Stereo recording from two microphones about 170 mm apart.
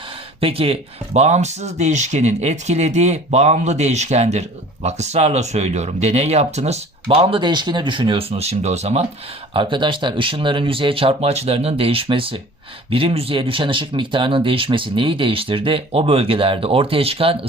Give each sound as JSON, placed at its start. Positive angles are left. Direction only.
{"t": 0.3, "sound": "speech", "side_deg": -35}